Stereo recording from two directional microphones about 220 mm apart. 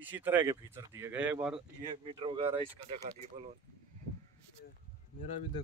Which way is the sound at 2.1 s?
25° right (ahead or behind).